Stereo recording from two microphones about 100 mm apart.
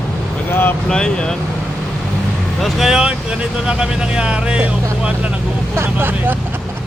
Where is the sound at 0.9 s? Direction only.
5° left (ahead or behind).